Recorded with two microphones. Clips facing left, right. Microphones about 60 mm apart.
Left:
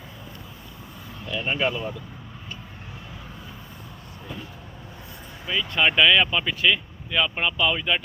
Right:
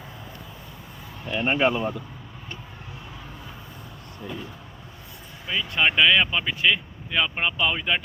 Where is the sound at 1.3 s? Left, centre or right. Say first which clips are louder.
Right 3 dB; right.